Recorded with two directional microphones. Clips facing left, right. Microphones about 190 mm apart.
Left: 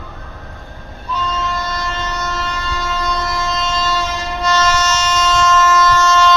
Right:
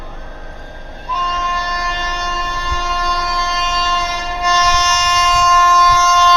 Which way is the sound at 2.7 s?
10° right (ahead or behind).